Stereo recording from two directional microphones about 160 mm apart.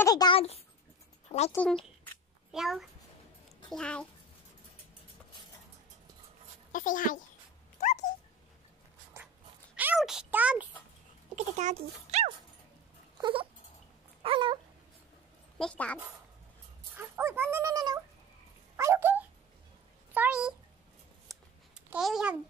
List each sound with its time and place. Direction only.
0.0 s a sound: 25° left (ahead or behind)
1.5 s a child's voice: 10° left (ahead or behind)
6.7 s speech: 55° left (ahead or behind)
7.8 s dog: 45° left (ahead or behind)
9.8 s a child's voice: 5° right (ahead or behind)
11.3 s a child's voice: 45° right (ahead or behind)
13.2 s dog: 35° right (ahead or behind)
15.5 s speech: 5° left (ahead or behind)
16.9 s speech: 15° right (ahead or behind)
18.8 s dog: 15° right (ahead or behind)
20.2 s speech: 10° right (ahead or behind)
21.3 s a sound: 5° right (ahead or behind)